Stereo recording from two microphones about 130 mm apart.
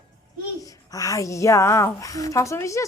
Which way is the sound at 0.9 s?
25° left (ahead or behind).